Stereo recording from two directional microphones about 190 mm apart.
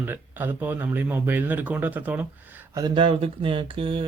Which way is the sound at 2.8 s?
25° right (ahead or behind).